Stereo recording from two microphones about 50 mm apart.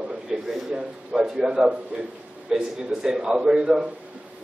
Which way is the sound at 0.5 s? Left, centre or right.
Centre.